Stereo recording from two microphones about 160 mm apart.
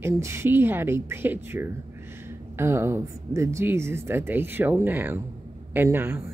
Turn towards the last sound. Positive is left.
turn(degrees=-15)  # may be behind; listen again after turning